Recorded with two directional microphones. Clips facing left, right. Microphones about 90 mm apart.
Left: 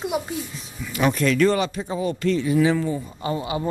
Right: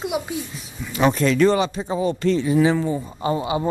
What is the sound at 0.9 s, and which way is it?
Speech, 25° right (ahead or behind).